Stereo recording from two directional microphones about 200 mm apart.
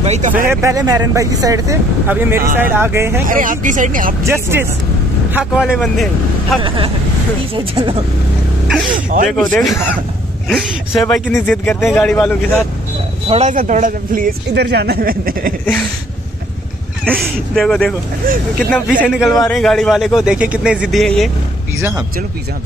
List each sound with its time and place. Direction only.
0.0 s speech: 35° right (ahead or behind)
0.5 s speech: 15° right (ahead or behind)
3.3 s speech: 40° right (ahead or behind)
4.2 s a man's voice: 10° right (ahead or behind)
7.5 s speech: 25° right (ahead or behind)
8.9 s speech: 40° right (ahead or behind)
9.3 s a man's voice: centre (ahead or behind)
11.0 s a man's voice: centre (ahead or behind)
13.3 s a man's voice: 35° right (ahead or behind)
17.0 s a man's voice: 5° left (ahead or behind)